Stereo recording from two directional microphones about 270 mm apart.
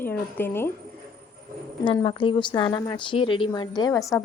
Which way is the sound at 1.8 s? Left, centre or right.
Centre.